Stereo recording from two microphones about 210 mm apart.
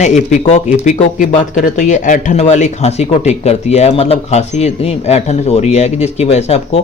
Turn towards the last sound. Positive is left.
turn(degrees=30)  # may be behind; listen again after turning